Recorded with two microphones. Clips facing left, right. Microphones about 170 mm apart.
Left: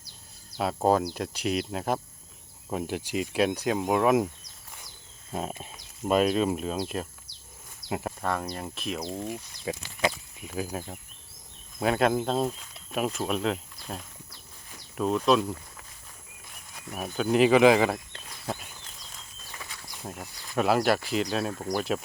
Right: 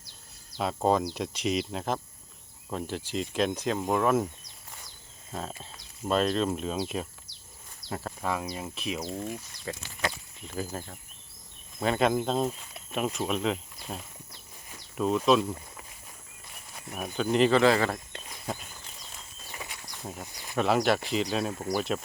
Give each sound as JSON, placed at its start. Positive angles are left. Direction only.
{"t": 0.6, "sound": "speech", "side_deg": 5}
{"t": 5.3, "sound": "speech", "side_deg": 15}
{"t": 7.9, "sound": "speech", "side_deg": 15}
{"t": 8.2, "sound": "speech", "side_deg": -5}
{"t": 9.2, "sound": "speech", "side_deg": 15}
{"t": 16.9, "sound": "speech", "side_deg": 5}
{"t": 17.9, "sound": "a sound", "side_deg": 0}
{"t": 19.5, "sound": "a sound", "side_deg": -15}
{"t": 20.6, "sound": "speech", "side_deg": 5}